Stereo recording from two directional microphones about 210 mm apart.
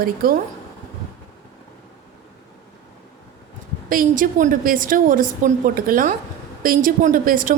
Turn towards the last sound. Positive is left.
turn(degrees=-40)  # may be behind; listen again after turning